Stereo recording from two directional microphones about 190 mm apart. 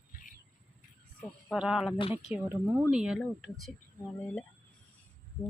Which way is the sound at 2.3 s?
10° right (ahead or behind).